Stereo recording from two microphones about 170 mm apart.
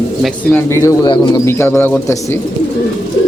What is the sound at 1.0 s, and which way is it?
Speech, 25° left (ahead or behind).